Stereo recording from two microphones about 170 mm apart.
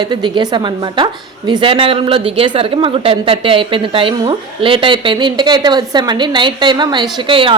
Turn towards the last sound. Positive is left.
turn(degrees=-30)  # may be behind; listen again after turning